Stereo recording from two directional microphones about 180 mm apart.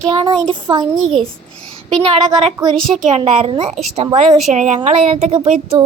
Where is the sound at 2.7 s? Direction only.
5° left (ahead or behind).